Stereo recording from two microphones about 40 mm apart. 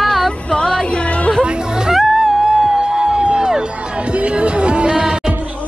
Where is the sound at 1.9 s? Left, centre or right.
Centre.